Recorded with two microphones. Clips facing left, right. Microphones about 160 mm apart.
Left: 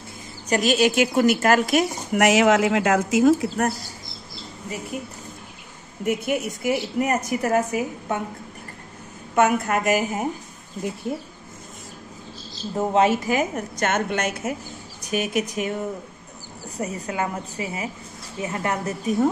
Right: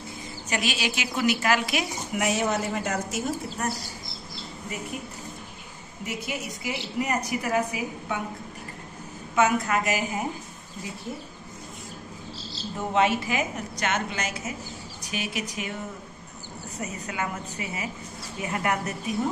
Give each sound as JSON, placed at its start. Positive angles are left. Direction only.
{"t": 0.5, "sound": "a woman's voice", "side_deg": 40}
{"t": 2.1, "sound": "speech", "side_deg": 85}
{"t": 6.0, "sound": "a woman's voice", "side_deg": 55}
{"t": 9.4, "sound": "a woman's voice", "side_deg": 50}
{"t": 12.7, "sound": "a woman's voice", "side_deg": 40}
{"t": 16.8, "sound": "a woman's voice", "side_deg": 35}